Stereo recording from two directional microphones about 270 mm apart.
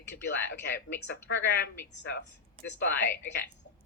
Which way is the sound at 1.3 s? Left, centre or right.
Left.